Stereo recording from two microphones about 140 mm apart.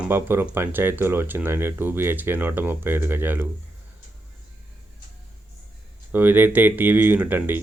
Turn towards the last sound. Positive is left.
turn(degrees=-15)  # may be behind; listen again after turning